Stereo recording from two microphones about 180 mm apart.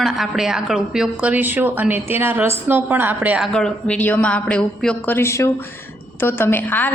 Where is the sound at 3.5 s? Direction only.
5° left (ahead or behind).